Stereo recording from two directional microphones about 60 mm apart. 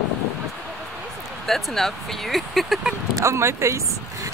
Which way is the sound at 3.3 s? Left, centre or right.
Right.